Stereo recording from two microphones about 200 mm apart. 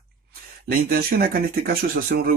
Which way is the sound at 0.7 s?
50° right (ahead or behind).